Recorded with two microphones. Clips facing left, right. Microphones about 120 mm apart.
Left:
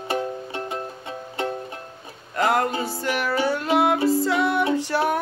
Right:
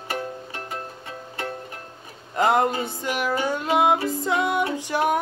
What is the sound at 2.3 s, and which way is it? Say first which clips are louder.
Music: right 1 dB; 20° right (ahead or behind).